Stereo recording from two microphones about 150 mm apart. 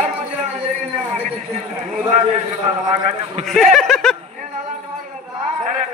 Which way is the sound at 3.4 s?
Centre (ahead or behind).